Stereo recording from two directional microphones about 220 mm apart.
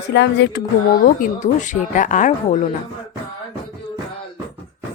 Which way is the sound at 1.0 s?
35° left (ahead or behind).